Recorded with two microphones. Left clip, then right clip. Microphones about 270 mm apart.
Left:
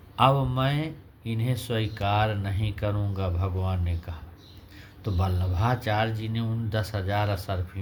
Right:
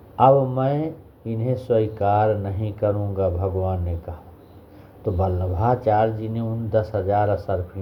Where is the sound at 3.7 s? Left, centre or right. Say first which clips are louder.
Right 7 dB; left.